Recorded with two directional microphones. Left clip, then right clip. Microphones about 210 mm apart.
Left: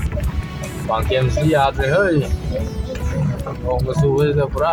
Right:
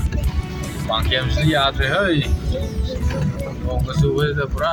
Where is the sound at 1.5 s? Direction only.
15° right (ahead or behind).